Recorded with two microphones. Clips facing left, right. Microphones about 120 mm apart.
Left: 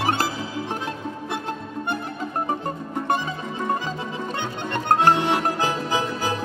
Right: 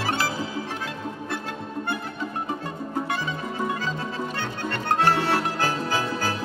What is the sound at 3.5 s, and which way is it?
Music, 20° left (ahead or behind).